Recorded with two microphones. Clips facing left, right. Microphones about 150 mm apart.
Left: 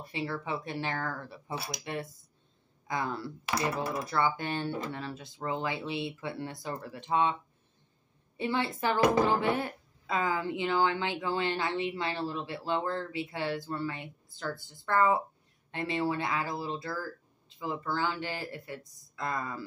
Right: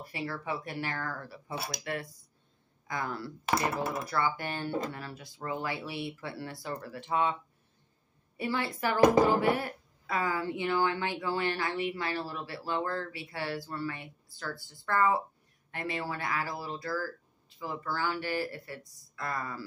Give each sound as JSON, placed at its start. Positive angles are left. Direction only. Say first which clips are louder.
{"t": 0.0, "sound": "a woman's voice", "louder": "left 2 dB", "side_deg": 20}
{"t": 8.4, "sound": "a woman's voice", "louder": "left 1 dB", "side_deg": 25}